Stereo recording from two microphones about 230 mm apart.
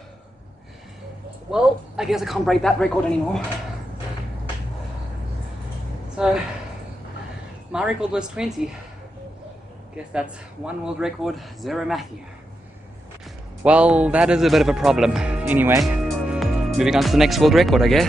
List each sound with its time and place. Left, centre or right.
1.5 s speech: centre
6.2 s speech: centre
7.7 s speech: centre
10.1 s speech: centre
13.6 s speech: centre